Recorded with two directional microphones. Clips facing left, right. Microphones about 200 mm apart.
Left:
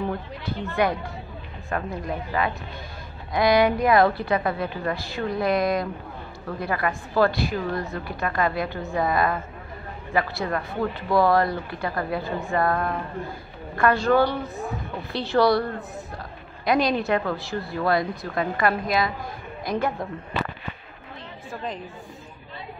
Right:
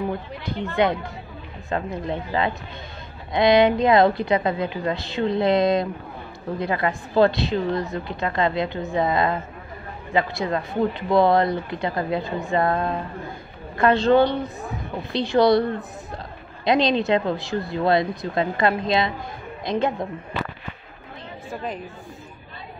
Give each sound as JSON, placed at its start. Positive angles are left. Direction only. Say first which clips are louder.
{"t": 0.8, "sound": "speech", "louder": "right 2 dB", "side_deg": -20}